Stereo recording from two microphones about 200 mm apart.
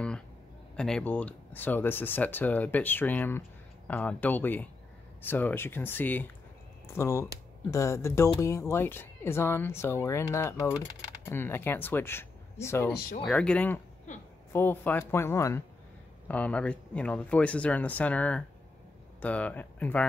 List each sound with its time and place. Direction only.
0.7 s speech: 5° left (ahead or behind)
12.9 s speech: 50° left (ahead or behind)
13.2 s speech: 5° left (ahead or behind)
14.1 s a woman's voice: 35° left (ahead or behind)
14.5 s speech: 10° left (ahead or behind)